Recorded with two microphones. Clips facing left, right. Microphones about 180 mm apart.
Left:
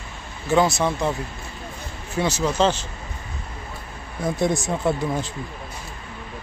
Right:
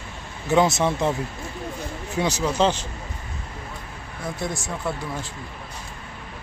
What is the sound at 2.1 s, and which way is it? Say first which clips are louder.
Speech: left 1 dB; 15° right (ahead or behind).